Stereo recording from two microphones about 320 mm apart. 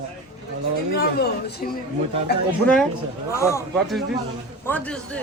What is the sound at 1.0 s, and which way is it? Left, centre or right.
Speech, left.